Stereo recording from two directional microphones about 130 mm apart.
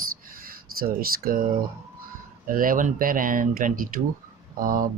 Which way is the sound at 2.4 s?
90° right.